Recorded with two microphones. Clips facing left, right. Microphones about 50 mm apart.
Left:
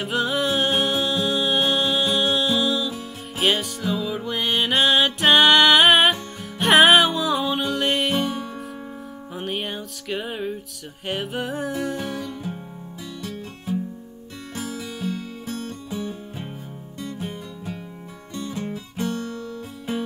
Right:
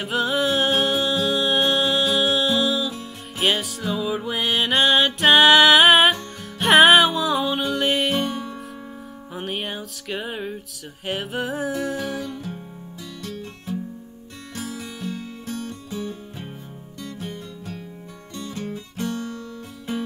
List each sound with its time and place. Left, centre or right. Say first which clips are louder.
0.0 s music: right 1 dB; centre
13.2 s music: right 1 dB; centre
14.5 s music: left 1 dB; left
15.9 s music: left 2 dB; centre
18.9 s music: left 1 dB; left